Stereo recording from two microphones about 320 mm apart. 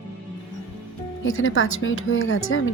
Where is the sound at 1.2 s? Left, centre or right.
Left.